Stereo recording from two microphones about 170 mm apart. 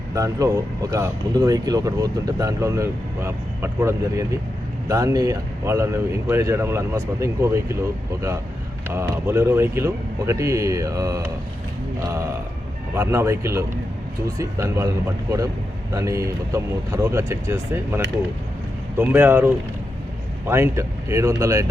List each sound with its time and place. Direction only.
0.1 s speech: 20° right (ahead or behind)